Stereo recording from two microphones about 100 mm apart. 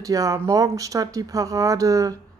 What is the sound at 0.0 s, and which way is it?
Speech, 35° right (ahead or behind).